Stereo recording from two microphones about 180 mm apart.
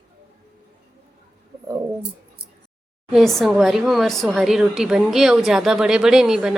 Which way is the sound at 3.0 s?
Centre (ahead or behind).